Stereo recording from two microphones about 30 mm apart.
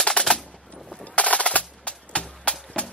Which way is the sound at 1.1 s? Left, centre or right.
Left.